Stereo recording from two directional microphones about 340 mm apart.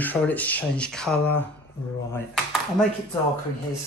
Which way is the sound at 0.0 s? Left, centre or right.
Centre.